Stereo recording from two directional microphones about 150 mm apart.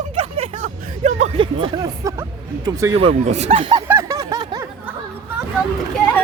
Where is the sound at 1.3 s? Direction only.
35° right (ahead or behind).